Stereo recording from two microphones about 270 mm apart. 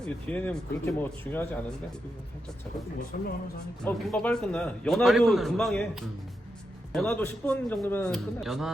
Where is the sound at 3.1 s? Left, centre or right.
Left.